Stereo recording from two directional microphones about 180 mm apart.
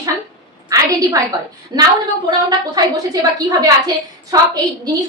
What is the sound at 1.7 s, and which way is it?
A woman's voice, 20° right (ahead or behind).